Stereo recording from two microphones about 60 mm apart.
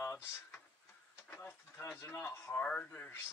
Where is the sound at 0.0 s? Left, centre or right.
Left.